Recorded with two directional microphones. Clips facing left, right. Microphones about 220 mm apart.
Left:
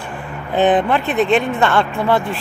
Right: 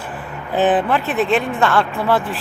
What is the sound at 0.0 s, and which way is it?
Speech, 5° right (ahead or behind).